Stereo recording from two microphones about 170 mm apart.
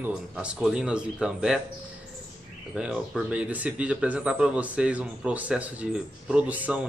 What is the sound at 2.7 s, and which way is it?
Speech, 5° right (ahead or behind).